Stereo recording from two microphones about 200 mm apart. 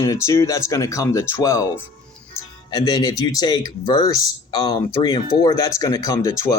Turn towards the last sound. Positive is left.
turn(degrees=15)  # may be behind; listen again after turning